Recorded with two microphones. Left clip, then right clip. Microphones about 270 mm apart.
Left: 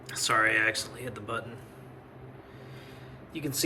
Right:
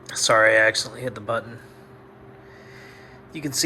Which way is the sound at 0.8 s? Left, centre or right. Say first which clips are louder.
Right 8 dB; centre.